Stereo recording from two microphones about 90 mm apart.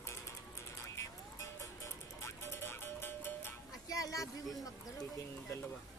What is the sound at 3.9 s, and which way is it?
Speech, 40° left (ahead or behind).